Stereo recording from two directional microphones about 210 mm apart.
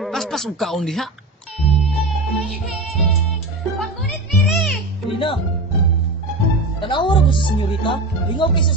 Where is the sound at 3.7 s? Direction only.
Centre (ahead or behind).